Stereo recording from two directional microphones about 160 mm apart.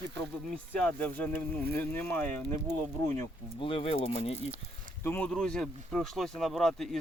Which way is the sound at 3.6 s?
35° left (ahead or behind).